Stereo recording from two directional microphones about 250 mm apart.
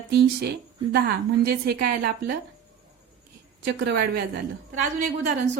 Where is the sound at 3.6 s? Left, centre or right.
Right.